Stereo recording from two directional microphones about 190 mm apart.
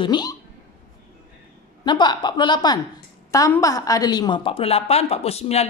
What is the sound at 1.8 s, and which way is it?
A woman's voice, 25° left (ahead or behind).